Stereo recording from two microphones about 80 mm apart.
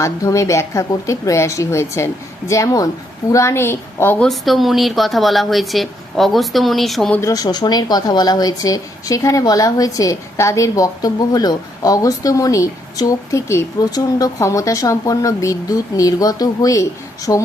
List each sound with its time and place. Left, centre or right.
0.0 s a woman's voice: left
4.2 s speech: centre
7.2 s speech: left